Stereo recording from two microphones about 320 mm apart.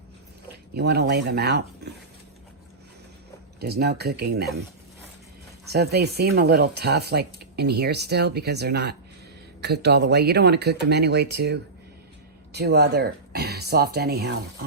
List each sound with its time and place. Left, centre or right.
0.8 s speech: right
3.6 s speech: right
5.7 s speech: right